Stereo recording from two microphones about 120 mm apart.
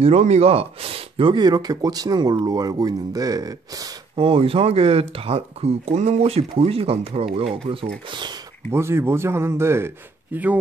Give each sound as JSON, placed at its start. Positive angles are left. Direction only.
{"t": 0.0, "sound": "speech", "side_deg": -65}
{"t": 4.2, "sound": "speech", "side_deg": -50}
{"t": 8.1, "sound": "speech", "side_deg": -40}
{"t": 8.7, "sound": "a man's voice", "side_deg": -20}